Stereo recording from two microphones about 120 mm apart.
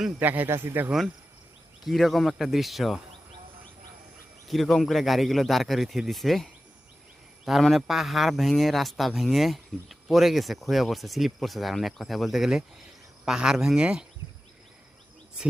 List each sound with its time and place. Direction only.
0.2 s speech: 15° right (ahead or behind)
0.9 s speech: centre (ahead or behind)
4.4 s speech: centre (ahead or behind)